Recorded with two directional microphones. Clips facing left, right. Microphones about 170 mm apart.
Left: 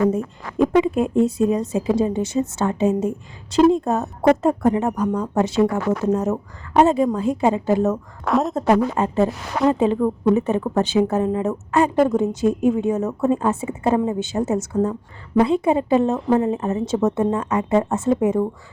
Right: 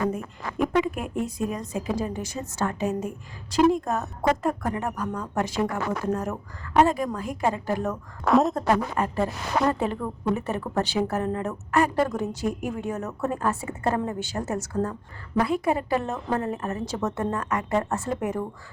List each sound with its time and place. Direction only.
0.1 s a woman's voice: 25° left (ahead or behind)
8.2 s a woman's voice: centre (ahead or behind)
8.5 s a woman's voice: 20° left (ahead or behind)